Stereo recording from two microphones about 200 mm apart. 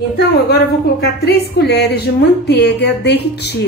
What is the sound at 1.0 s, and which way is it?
A woman's voice, 55° left (ahead or behind).